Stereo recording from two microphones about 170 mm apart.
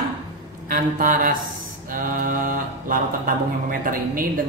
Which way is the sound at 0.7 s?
55° right (ahead or behind).